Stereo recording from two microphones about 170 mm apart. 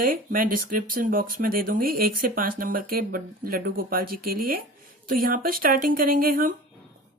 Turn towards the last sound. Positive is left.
turn(degrees=-55)  # may be behind; listen again after turning